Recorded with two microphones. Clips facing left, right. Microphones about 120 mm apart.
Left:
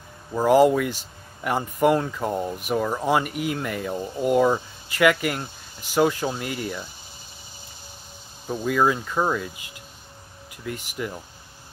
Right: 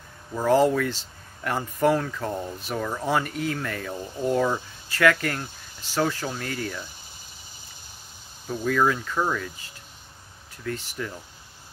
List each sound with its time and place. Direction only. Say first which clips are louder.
0.3 s speech: left 3 dB; 15° left (ahead or behind)
8.5 s speech: left 1 dB; 15° left (ahead or behind)